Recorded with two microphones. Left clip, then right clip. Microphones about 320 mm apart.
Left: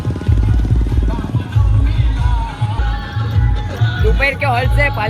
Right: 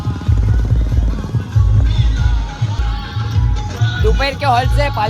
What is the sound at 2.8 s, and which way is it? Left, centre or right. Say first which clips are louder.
Music: left 1 dB; centre.